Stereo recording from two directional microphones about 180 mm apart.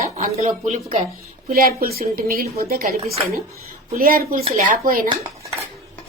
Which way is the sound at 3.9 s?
55° right (ahead or behind).